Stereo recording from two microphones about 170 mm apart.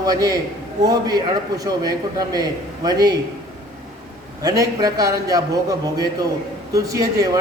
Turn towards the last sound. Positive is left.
turn(degrees=-20)  # may be behind; listen again after turning